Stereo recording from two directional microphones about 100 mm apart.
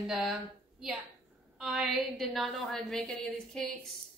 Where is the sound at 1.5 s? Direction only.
5° right (ahead or behind).